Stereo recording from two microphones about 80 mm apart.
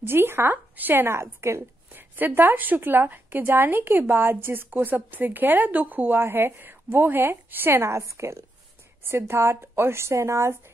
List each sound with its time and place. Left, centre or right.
0.0 s a woman's voice: right